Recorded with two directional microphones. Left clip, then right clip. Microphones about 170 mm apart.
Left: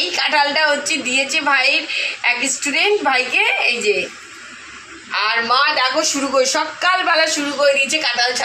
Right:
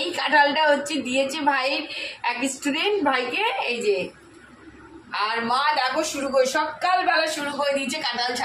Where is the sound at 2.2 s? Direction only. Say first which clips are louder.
Left 5 dB; 15° left (ahead or behind).